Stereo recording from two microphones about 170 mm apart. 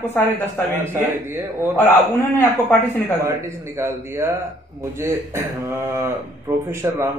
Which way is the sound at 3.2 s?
15° right (ahead or behind).